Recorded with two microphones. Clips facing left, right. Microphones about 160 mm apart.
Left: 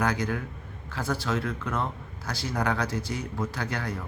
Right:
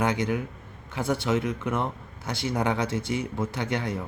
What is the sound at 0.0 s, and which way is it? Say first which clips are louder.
Speech: right 2 dB; 20° right (ahead or behind).